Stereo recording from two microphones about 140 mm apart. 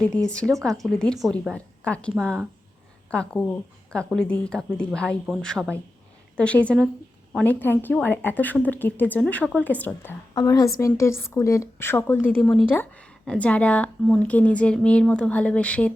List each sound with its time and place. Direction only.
0.3 s speech: 5° left (ahead or behind)
1.5 s a woman's voice: 10° left (ahead or behind)
10.3 s speech: 25° left (ahead or behind)
12.4 s speech: centre (ahead or behind)
12.7 s a woman's voice: 10° left (ahead or behind)